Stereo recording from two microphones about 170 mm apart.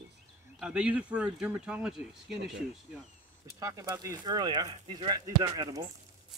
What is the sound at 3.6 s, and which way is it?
Speech, 20° right (ahead or behind).